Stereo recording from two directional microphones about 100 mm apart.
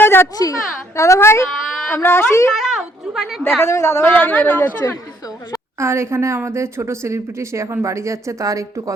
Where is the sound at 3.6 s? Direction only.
30° left (ahead or behind).